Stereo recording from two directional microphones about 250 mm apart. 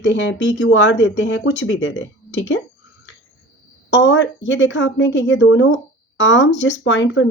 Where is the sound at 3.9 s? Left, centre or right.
Left.